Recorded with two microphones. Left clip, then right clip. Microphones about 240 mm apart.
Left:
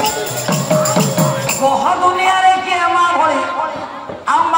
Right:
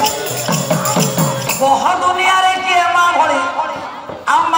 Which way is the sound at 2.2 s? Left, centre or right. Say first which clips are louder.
Even; right.